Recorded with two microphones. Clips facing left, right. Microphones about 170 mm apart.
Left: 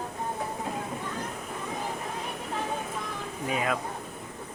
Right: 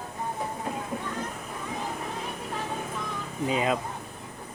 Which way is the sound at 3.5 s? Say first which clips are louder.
Right 3 dB; 20° right (ahead or behind).